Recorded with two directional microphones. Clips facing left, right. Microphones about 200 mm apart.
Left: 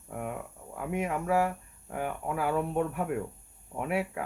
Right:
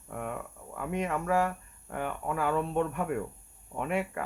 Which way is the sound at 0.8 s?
10° left (ahead or behind).